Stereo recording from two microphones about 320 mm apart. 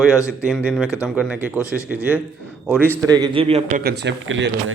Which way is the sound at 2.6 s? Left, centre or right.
Centre.